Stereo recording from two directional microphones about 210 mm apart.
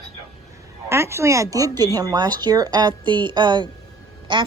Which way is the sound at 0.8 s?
15° right (ahead or behind).